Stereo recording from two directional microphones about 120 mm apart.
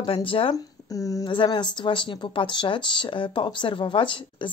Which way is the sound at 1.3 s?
40° left (ahead or behind).